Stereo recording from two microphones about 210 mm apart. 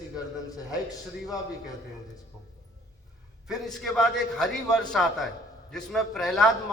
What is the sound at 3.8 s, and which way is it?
A man's voice, centre (ahead or behind).